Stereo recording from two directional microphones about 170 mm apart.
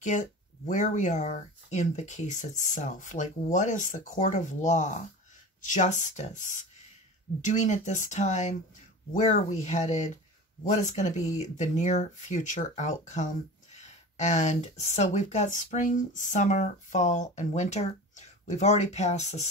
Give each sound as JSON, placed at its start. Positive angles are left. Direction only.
{"t": 0.0, "sound": "speech", "side_deg": 45}